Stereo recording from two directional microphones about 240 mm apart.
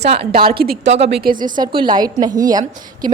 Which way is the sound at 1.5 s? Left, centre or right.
Centre.